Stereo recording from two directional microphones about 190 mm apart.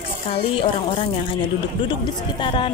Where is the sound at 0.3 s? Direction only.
30° left (ahead or behind).